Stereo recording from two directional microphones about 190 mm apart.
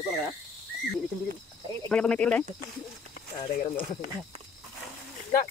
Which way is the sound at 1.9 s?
5° left (ahead or behind).